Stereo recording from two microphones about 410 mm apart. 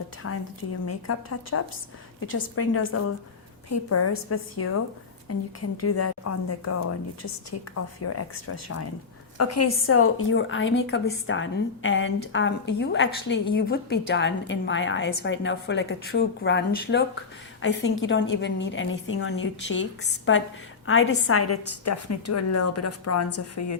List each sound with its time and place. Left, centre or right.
0.2 s a woman's voice: left